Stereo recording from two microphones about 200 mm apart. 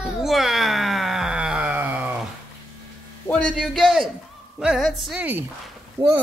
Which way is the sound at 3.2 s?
5° left (ahead or behind).